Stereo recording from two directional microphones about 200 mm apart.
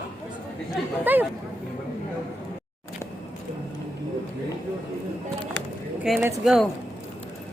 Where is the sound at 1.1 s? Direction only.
10° right (ahead or behind).